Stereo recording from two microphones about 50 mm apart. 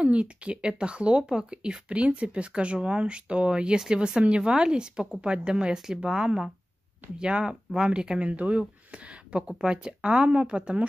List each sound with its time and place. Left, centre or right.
0.0 s speech: right